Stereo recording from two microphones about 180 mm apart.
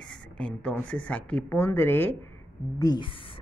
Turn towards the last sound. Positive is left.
turn(degrees=25)  # may be behind; listen again after turning